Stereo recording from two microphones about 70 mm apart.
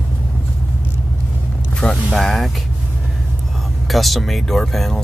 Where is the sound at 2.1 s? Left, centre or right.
Centre.